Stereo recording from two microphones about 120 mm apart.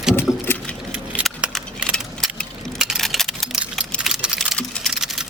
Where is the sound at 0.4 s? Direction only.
15° left (ahead or behind).